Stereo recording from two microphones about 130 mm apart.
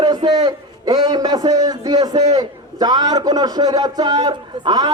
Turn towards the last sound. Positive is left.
turn(degrees=-35)  # may be behind; listen again after turning